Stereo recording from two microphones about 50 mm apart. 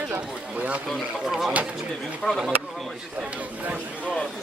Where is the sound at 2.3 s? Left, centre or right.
Centre.